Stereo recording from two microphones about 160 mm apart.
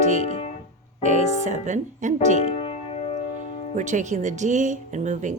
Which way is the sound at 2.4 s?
40° left (ahead or behind).